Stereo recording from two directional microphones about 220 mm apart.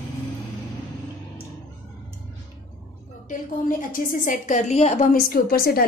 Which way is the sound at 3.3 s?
35° left (ahead or behind).